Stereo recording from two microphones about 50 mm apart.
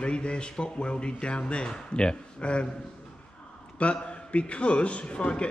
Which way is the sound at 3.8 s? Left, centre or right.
Left.